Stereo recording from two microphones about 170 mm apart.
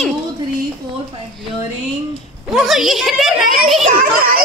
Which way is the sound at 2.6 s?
Centre (ahead or behind).